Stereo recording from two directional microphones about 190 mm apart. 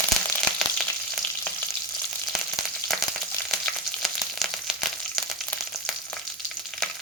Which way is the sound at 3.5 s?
Centre (ahead or behind).